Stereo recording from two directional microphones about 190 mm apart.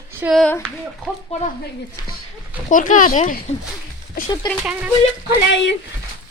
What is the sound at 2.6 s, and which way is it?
Speech, 45° left (ahead or behind).